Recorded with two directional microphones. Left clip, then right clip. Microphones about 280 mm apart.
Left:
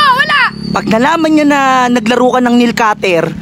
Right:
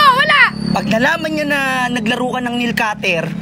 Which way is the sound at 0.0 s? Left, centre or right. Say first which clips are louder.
Left 1 dB; centre.